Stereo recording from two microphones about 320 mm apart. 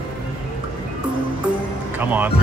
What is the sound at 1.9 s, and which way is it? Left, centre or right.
Music, centre.